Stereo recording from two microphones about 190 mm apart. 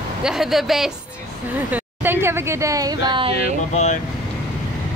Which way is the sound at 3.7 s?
35° left (ahead or behind).